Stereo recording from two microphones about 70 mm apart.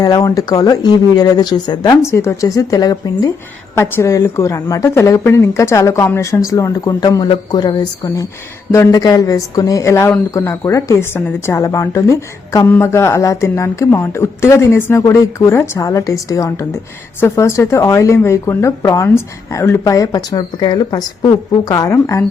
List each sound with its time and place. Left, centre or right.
0.0 s a woman's voice: left
1.9 s a woman's voice: left
3.8 s a woman's voice: left
8.7 s speech: left
9.8 s a woman's voice: left
15.1 s a woman's voice: left
20.0 s a woman's voice: left